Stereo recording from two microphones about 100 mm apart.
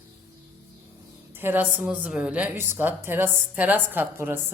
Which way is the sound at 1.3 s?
20° right (ahead or behind).